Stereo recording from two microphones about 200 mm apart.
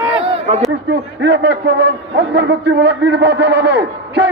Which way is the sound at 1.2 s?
55° right (ahead or behind).